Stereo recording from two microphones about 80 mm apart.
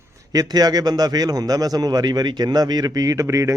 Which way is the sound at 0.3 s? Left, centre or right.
Right.